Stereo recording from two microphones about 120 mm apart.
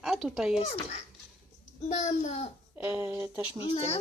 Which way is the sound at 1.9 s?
80° left.